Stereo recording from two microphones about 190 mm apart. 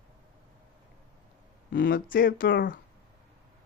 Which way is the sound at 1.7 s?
70° left (ahead or behind).